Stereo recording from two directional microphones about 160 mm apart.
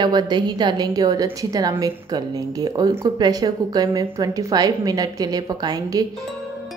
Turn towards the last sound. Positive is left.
turn(degrees=-25)  # may be behind; listen again after turning